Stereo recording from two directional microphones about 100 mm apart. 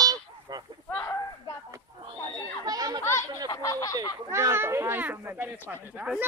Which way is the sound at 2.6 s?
40° right (ahead or behind).